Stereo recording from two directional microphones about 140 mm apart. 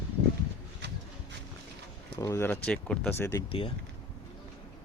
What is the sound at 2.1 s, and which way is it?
Speech, 20° left (ahead or behind).